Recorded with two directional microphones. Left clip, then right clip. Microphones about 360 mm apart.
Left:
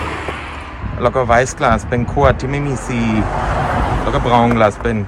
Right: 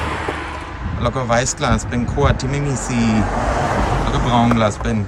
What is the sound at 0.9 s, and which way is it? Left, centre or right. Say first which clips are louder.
Speech: left 5 dB; centre.